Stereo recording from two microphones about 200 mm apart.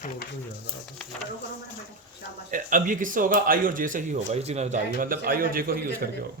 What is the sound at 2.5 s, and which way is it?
Speech, 40° right (ahead or behind).